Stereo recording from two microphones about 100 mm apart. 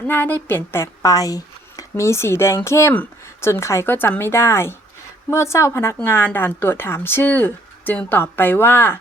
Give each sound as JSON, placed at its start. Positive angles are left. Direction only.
{"t": 0.1, "sound": "speech", "side_deg": 20}
{"t": 1.1, "sound": "speech", "side_deg": 35}
{"t": 2.9, "sound": "speech", "side_deg": 15}
{"t": 3.5, "sound": "speech", "side_deg": 30}